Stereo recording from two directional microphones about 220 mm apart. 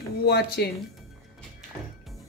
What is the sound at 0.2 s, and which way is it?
Speech, 45° left (ahead or behind).